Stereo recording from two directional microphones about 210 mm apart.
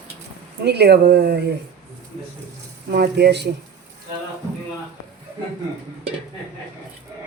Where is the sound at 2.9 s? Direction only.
45° right (ahead or behind).